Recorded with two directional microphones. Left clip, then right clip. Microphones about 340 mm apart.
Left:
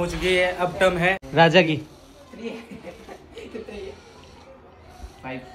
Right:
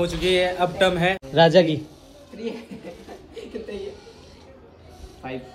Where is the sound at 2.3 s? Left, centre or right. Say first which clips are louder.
Right 2 dB; centre.